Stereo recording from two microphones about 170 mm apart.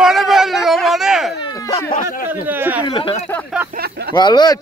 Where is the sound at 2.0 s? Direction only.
55° left (ahead or behind).